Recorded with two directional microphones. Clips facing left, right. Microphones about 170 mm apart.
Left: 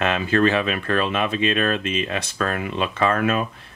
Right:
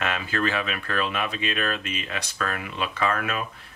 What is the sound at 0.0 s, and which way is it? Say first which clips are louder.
Speech: left 8 dB; 30° left (ahead or behind).